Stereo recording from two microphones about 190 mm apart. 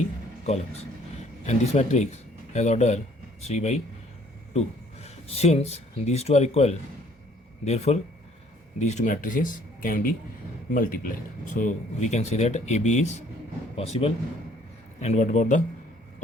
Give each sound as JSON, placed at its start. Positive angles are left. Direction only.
{"t": 0.4, "sound": "a man's voice", "side_deg": 35}